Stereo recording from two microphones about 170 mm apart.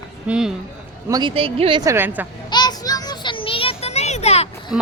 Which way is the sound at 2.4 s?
25° left (ahead or behind).